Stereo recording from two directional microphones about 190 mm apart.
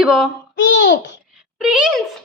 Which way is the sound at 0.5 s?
80° left.